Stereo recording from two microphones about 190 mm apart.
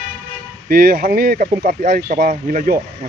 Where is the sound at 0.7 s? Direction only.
50° right (ahead or behind).